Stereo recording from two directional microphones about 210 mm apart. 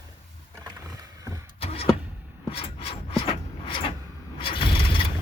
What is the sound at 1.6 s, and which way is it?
Vehicle, 30° left (ahead or behind).